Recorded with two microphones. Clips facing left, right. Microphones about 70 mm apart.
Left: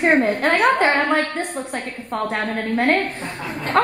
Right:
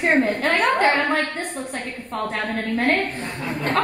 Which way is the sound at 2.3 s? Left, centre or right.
Left.